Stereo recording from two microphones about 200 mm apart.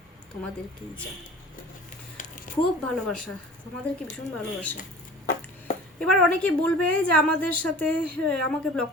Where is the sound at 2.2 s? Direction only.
40° left (ahead or behind).